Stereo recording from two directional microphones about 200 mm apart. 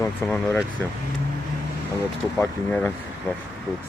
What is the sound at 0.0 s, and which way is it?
Speech, 10° left (ahead or behind).